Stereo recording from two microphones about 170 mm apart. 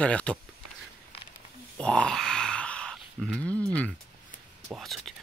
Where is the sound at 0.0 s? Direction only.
5° left (ahead or behind).